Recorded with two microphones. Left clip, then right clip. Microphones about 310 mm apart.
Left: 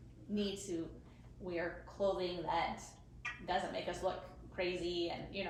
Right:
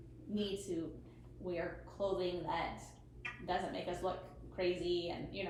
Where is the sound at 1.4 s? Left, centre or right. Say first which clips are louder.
Even; left.